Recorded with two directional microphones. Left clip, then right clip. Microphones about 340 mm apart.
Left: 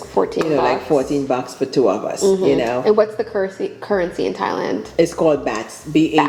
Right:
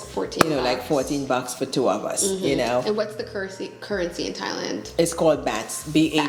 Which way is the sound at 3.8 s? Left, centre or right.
Left.